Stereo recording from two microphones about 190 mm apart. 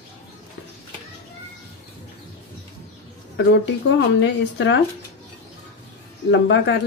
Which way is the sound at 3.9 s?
70° left (ahead or behind).